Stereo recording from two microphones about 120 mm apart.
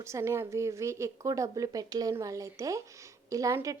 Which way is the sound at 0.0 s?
25° right (ahead or behind).